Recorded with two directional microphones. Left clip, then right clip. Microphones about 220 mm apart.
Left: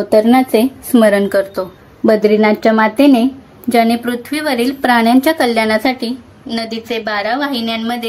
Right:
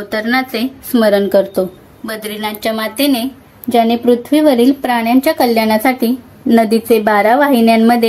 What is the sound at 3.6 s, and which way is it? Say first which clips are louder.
A woman's voice: right 2 dB; 55° left (ahead or behind).